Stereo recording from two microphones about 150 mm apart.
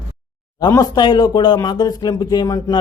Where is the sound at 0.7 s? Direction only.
25° left (ahead or behind).